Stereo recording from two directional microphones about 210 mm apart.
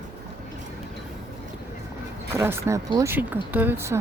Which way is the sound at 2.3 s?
10° right (ahead or behind).